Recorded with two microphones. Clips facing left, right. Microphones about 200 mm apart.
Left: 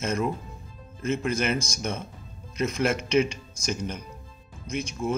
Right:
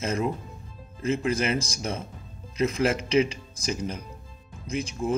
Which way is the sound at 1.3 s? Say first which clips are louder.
Even; 30° right (ahead or behind).